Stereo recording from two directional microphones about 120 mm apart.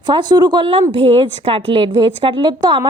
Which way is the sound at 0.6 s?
50° right (ahead or behind).